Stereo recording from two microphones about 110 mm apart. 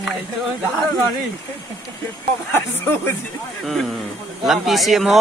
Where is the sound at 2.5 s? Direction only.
20° left (ahead or behind).